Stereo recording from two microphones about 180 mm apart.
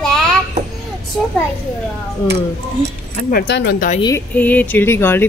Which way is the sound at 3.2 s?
55° left (ahead or behind).